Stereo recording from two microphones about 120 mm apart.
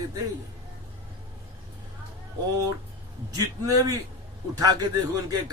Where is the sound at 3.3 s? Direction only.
30° right (ahead or behind).